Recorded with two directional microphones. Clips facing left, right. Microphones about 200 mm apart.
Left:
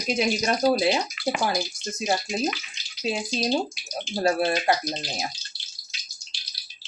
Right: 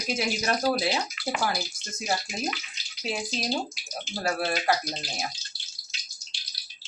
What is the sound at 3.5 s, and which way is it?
Speech, 25° left (ahead or behind).